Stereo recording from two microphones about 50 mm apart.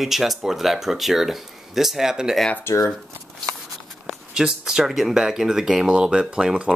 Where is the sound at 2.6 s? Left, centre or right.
Left.